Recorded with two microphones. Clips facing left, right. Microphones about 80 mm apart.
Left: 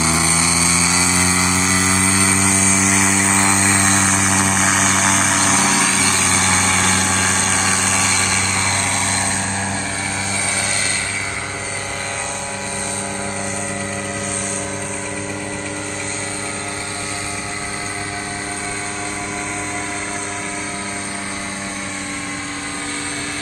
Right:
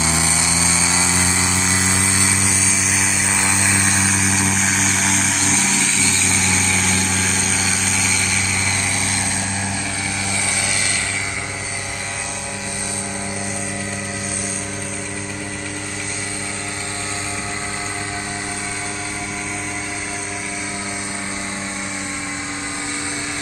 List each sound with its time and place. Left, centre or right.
0.0 s vehicle: left
1.2 s a sound: left
2.8 s vehicle: centre
3.8 s vehicle: left
4.1 s vehicle: centre
5.4 s vehicle: left
7.1 s vehicle: centre